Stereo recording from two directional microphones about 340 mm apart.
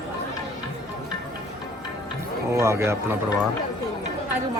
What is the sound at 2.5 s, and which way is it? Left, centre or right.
Speech, centre.